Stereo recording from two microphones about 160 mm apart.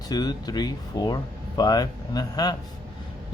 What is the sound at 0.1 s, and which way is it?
Speech, 25° left (ahead or behind).